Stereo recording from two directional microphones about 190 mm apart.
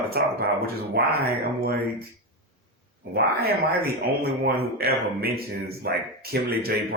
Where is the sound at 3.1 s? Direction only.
55° right (ahead or behind).